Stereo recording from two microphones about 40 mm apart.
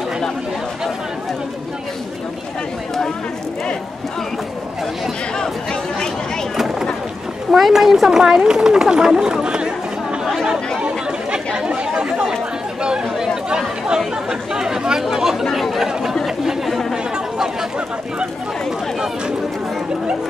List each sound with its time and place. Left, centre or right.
5.4 s chatter: centre
6.5 s a sound: centre
7.5 s speech: centre; by 9.7 s right
10.8 s chatter: right
14.5 s speech: centre
15.9 s chatter: centre